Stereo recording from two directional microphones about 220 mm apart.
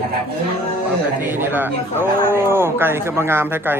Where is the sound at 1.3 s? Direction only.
10° right (ahead or behind).